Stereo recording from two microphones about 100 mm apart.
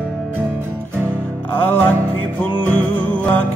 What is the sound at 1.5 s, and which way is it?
Music, 20° left (ahead or behind).